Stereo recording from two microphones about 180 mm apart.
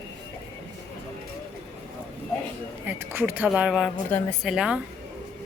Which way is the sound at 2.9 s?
10° right (ahead or behind).